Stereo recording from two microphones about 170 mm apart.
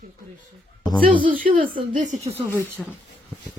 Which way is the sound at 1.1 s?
30° right (ahead or behind).